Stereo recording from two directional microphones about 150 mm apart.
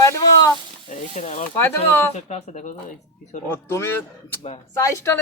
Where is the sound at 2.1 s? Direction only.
45° left (ahead or behind).